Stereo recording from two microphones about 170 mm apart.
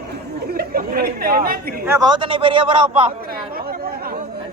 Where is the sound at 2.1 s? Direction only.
30° right (ahead or behind).